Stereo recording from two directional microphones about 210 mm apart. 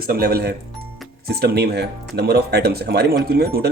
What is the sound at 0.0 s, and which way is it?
Speech, 45° right (ahead or behind).